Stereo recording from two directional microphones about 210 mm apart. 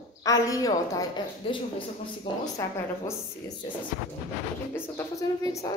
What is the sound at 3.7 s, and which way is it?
Speech, 25° left (ahead or behind).